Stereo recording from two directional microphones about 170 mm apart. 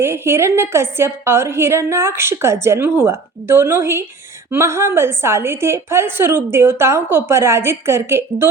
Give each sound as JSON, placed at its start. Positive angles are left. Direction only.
{"t": 0.0, "sound": "a woman's voice", "side_deg": -15}